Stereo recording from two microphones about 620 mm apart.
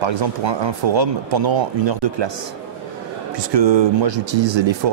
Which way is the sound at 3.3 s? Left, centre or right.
Right.